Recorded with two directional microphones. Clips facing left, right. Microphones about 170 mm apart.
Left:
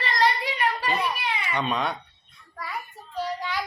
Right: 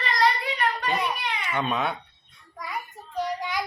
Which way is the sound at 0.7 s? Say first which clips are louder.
Even; 5° left (ahead or behind).